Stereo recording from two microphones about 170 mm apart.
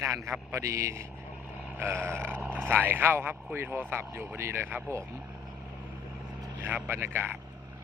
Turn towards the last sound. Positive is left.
turn(degrees=-10)  # may be behind; listen again after turning